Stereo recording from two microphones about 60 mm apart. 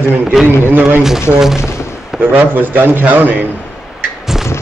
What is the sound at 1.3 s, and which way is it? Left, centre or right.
A man's voice, right.